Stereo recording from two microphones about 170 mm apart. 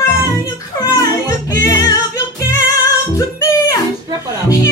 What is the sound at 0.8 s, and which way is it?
Music, 25° left (ahead or behind).